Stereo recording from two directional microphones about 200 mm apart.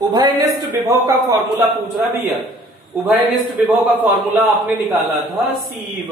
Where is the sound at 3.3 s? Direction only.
Centre (ahead or behind).